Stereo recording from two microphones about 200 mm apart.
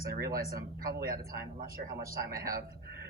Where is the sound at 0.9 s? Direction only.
50° right (ahead or behind).